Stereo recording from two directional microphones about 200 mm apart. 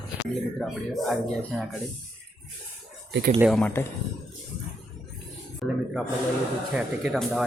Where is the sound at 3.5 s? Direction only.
10° left (ahead or behind).